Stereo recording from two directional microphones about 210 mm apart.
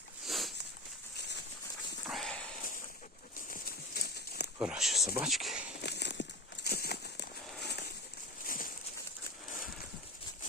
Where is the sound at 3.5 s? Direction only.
45° left (ahead or behind).